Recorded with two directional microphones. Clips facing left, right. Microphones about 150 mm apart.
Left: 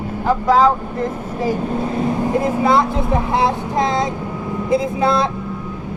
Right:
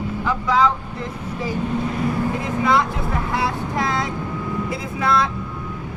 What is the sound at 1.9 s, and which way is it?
Vehicle, 25° left (ahead or behind).